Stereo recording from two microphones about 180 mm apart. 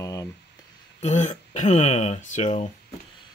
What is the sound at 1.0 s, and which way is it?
Speech, 40° left (ahead or behind).